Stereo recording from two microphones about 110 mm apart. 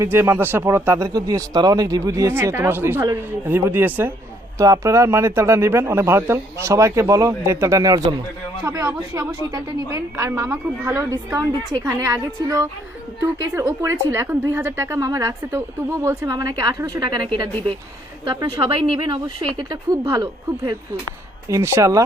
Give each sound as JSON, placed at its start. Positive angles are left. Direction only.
{"t": 0.0, "sound": "a woman's voice", "side_deg": -20}
{"t": 4.5, "sound": "a woman's voice", "side_deg": -30}
{"t": 17.1, "sound": "speech", "side_deg": -45}
{"t": 18.7, "sound": "speech", "side_deg": -50}
{"t": 19.5, "sound": "a woman's voice", "side_deg": -35}
{"t": 21.5, "sound": "a woman's voice", "side_deg": -25}